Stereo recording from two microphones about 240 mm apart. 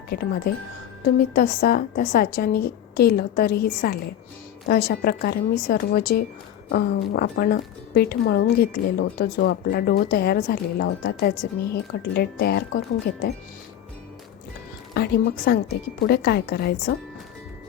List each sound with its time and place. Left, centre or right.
0.1 s a woman's voice: left
1.3 s a woman's voice: left
14.9 s a woman's voice: left